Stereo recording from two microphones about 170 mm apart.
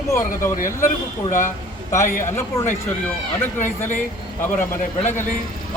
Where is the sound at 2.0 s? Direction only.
50° left (ahead or behind).